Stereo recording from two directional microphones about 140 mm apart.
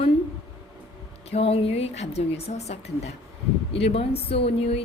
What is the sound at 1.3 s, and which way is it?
A woman's voice, 45° left (ahead or behind).